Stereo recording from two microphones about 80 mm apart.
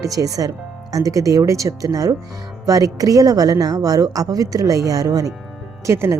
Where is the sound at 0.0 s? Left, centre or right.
Right.